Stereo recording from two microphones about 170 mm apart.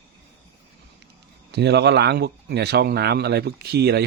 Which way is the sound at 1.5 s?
80° right.